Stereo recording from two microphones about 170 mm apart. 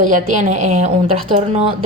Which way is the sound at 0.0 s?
50° right (ahead or behind).